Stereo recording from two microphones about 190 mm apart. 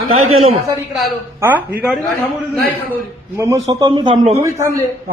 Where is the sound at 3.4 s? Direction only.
20° right (ahead or behind).